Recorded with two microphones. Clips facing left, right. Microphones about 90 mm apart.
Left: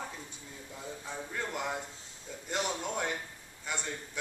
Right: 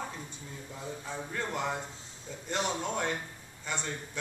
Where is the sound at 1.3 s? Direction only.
5° left (ahead or behind).